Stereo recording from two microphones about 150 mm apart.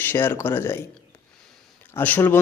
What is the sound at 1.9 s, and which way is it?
Speech, 10° left (ahead or behind).